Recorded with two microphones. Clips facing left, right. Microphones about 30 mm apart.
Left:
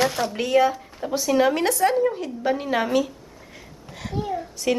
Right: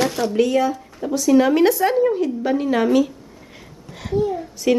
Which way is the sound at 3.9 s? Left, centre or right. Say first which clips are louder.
Right 8 dB; centre.